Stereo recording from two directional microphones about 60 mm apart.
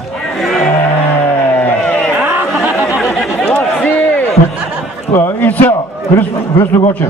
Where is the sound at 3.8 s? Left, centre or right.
Left.